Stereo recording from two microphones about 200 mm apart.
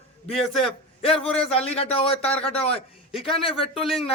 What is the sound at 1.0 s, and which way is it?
A man's voice, 30° left (ahead or behind).